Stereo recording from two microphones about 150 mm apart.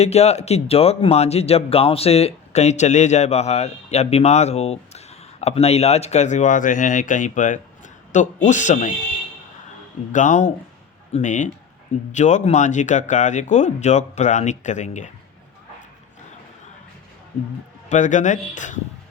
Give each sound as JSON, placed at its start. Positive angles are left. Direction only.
{"t": 0.0, "sound": "speech", "side_deg": 45}
{"t": 10.1, "sound": "speech", "side_deg": 55}
{"t": 17.8, "sound": "speech", "side_deg": 55}